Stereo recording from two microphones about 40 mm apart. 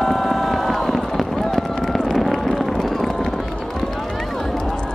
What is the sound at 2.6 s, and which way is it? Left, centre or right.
Run, centre.